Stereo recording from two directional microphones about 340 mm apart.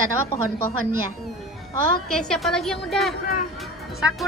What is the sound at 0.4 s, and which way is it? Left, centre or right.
Speech, right.